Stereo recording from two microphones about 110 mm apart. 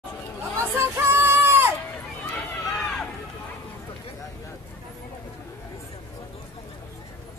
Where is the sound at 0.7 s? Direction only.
20° right (ahead or behind).